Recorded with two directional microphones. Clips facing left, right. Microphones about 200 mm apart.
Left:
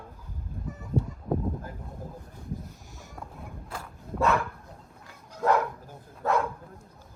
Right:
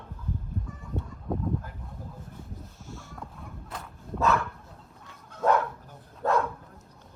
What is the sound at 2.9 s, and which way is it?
Boat, 15° left (ahead or behind).